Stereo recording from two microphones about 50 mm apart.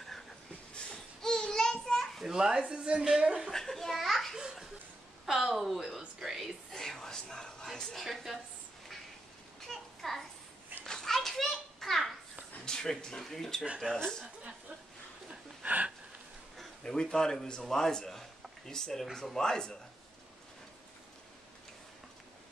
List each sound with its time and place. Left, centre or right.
1.2 s child singing: centre
2.1 s a child's voice: centre
3.4 s a child's voice: centre
6.7 s a woman's voice: centre
9.7 s a sound: centre
10.9 s children playing: centre
12.6 s a sound: centre
13.2 s a man's voice: centre
15.6 s a sound: right
16.5 s a man's voice: centre